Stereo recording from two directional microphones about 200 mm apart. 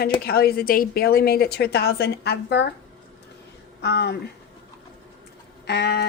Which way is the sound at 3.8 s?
55° left (ahead or behind).